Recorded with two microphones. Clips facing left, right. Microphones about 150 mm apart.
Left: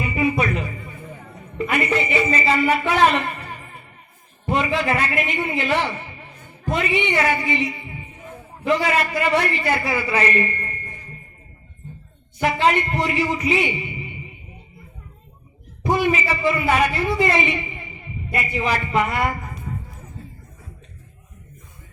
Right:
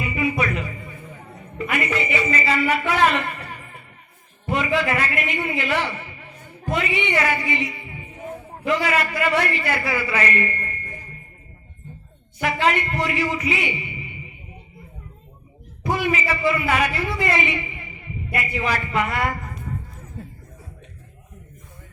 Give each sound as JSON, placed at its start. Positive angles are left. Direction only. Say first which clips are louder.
{"t": 0.0, "sound": "music", "louder": "left 2 dB", "side_deg": 30}
{"t": 1.5, "sound": "a man's voice", "louder": "left 3 dB", "side_deg": 30}
{"t": 12.4, "sound": "a man's voice", "louder": "left 2 dB", "side_deg": 30}
{"t": 15.8, "sound": "a man's voice", "louder": "left 3 dB", "side_deg": 25}